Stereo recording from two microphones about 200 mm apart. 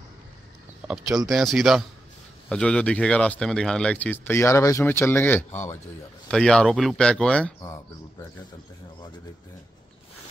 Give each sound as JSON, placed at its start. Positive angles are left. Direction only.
{"t": 0.8, "sound": "speech", "side_deg": -5}